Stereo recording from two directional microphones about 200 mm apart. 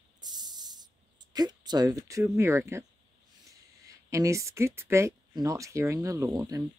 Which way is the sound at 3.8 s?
15° right (ahead or behind).